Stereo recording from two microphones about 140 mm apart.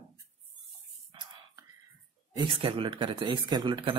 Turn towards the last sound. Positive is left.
turn(degrees=-35)  # may be behind; listen again after turning